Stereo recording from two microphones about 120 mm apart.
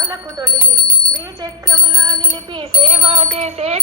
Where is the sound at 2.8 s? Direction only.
55° right (ahead or behind).